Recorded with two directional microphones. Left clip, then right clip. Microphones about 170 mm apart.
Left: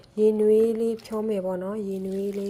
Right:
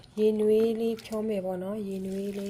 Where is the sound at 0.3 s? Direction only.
15° left (ahead or behind).